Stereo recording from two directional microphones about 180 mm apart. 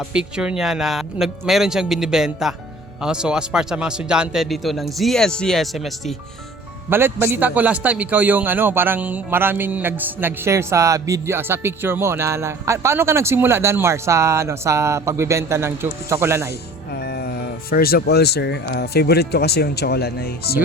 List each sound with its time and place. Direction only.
0.1 s speech: 5° right (ahead or behind)
6.9 s a man's voice: 10° right (ahead or behind)
16.9 s speech: 65° left (ahead or behind)